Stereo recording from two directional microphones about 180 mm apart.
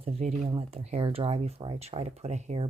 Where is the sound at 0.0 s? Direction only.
35° right (ahead or behind).